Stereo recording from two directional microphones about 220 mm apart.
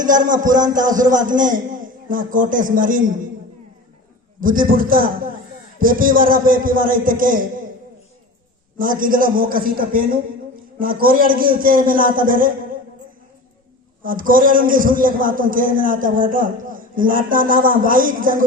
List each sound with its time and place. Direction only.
0.0 s a man's voice: 35° right (ahead or behind)
4.4 s a man's voice: 40° right (ahead or behind)
8.8 s a man's voice: 40° right (ahead or behind)
14.0 s a man's voice: 40° right (ahead or behind)